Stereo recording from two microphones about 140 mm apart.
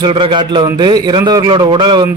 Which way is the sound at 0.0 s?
35° right (ahead or behind).